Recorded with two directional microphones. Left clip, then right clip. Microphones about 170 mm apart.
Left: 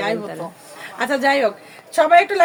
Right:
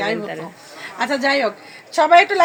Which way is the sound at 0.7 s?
20° left (ahead or behind).